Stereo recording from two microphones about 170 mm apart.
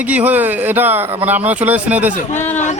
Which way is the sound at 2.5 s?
45° left (ahead or behind).